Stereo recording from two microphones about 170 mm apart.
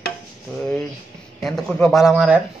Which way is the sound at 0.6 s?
5° left (ahead or behind).